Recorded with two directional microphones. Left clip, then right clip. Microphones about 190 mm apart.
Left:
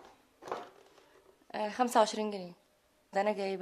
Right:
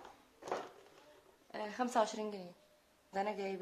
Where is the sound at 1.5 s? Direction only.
55° left (ahead or behind).